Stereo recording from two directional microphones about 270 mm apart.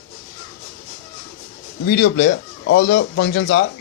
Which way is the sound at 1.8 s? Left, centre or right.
Left.